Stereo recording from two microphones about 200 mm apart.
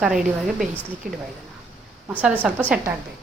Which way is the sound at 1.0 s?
45° right (ahead or behind).